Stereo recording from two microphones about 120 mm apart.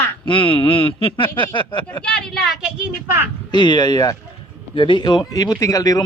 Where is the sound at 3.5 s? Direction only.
40° left (ahead or behind).